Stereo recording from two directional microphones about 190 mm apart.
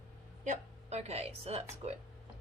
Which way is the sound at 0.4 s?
35° right (ahead or behind).